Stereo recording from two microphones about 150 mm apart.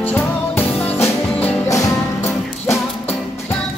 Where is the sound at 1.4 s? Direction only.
20° left (ahead or behind).